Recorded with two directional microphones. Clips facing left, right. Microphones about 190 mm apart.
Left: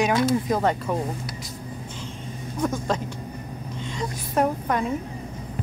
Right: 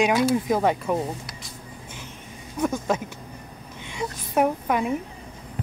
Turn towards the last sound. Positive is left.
turn(degrees=-10)  # may be behind; listen again after turning